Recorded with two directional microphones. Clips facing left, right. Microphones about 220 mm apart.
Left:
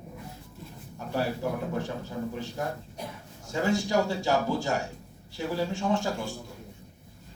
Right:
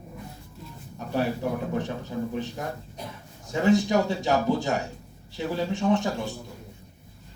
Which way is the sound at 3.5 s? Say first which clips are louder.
Right 5 dB; 20° right (ahead or behind).